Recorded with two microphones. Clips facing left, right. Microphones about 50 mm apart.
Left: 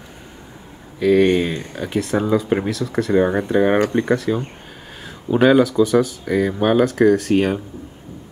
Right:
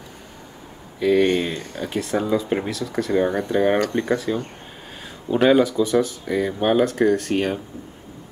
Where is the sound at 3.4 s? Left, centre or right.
Centre.